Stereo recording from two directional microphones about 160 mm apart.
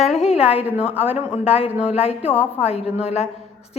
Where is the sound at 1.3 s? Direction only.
40° left (ahead or behind).